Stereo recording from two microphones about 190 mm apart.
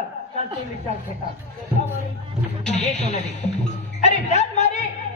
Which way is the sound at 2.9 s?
40° left (ahead or behind).